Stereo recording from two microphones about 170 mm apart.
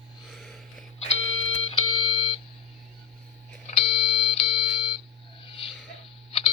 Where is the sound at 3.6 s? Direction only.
40° left (ahead or behind).